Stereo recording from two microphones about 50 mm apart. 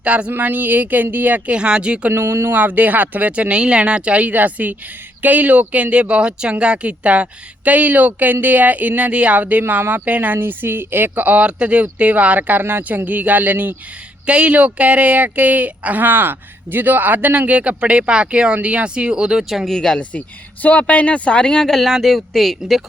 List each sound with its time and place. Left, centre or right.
0.0 s speech: right
0.3 s speech: right
1.5 s speech: right
2.1 s speech: right
2.5 s speech: right
11.4 s speech: right
14.3 s speech: right
19.6 s speech: centre
20.0 s speech: left
21.7 s speech: centre